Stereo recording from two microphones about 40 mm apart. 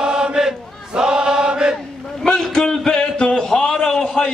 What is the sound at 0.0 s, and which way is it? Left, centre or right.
Chant, centre.